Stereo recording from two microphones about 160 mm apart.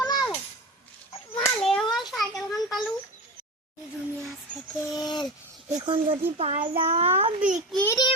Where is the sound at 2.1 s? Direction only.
Centre (ahead or behind).